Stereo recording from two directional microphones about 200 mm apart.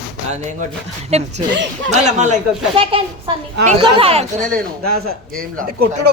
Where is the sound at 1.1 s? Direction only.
35° right (ahead or behind).